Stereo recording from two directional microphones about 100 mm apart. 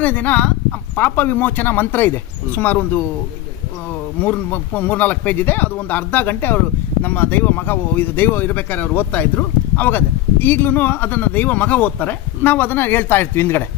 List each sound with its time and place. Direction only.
0.0 s a man's voice: 15° left (ahead or behind)
4.2 s a man's voice: 20° left (ahead or behind)